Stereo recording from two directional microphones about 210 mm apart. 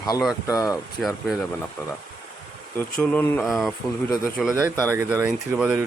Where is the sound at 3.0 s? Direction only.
10° left (ahead or behind).